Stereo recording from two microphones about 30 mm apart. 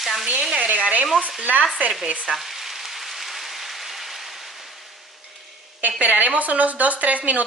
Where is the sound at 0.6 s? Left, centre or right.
Right.